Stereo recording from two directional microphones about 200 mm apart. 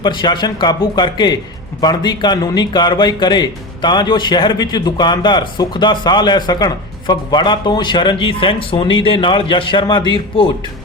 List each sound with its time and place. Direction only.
0.0 s speech: 25° left (ahead or behind)